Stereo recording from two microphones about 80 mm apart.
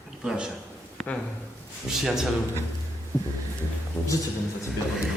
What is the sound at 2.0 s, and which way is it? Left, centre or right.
Speech, centre.